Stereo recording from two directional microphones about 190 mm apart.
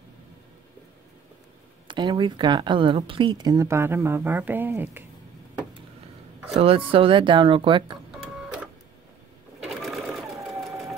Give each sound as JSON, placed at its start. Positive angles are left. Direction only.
{"t": 1.9, "sound": "speech", "side_deg": -25}
{"t": 6.4, "sound": "speech", "side_deg": -30}
{"t": 9.6, "sound": "sewing machine", "side_deg": 0}